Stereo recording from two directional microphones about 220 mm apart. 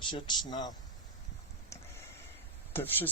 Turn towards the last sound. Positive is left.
turn(degrees=10)  # may be behind; listen again after turning